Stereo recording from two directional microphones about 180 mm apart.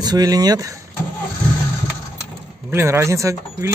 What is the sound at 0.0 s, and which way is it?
Speech, 20° right (ahead or behind).